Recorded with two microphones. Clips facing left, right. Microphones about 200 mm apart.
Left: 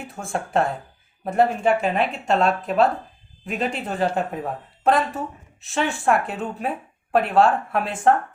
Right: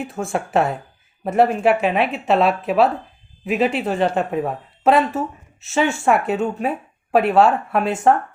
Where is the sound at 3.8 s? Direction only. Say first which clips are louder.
Right 7 dB; 80° right.